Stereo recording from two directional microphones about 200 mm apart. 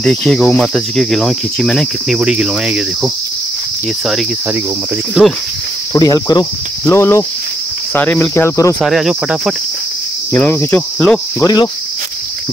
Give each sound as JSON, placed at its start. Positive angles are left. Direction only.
{"t": 0.0, "sound": "cricket", "side_deg": 5}
{"t": 5.2, "sound": "cricket", "side_deg": -5}
{"t": 5.9, "sound": "speech", "side_deg": 20}
{"t": 6.9, "sound": "cricket", "side_deg": 15}
{"t": 8.8, "sound": "cricket", "side_deg": 0}
{"t": 10.3, "sound": "cricket", "side_deg": 10}
{"t": 11.4, "sound": "speech", "side_deg": 20}